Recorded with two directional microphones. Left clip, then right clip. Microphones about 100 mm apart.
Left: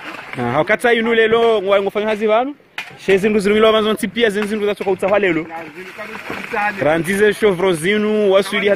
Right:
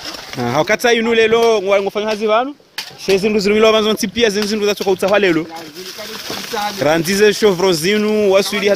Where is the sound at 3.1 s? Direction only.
10° right (ahead or behind).